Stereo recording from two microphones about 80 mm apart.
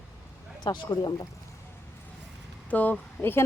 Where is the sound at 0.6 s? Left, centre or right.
Left.